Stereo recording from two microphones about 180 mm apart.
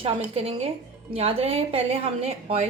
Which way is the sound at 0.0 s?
35° right (ahead or behind).